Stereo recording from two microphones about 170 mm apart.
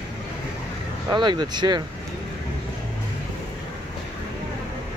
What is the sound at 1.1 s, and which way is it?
Speech, 25° right (ahead or behind).